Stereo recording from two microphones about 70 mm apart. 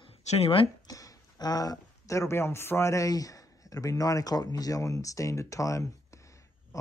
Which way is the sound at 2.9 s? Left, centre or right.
Left.